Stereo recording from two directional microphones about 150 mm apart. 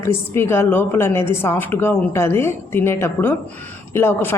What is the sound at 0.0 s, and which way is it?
A woman's voice, 15° left (ahead or behind).